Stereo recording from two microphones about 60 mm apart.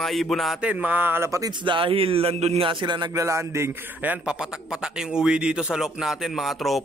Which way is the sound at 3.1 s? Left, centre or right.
Right.